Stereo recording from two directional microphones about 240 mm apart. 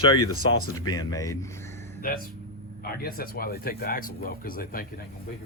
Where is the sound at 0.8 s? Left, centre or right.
Centre.